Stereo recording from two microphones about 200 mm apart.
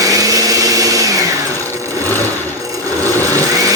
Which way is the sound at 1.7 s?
15° right (ahead or behind).